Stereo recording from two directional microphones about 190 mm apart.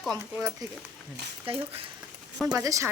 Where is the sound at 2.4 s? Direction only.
15° right (ahead or behind).